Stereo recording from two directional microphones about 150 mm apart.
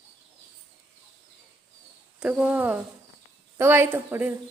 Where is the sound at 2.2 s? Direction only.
10° right (ahead or behind).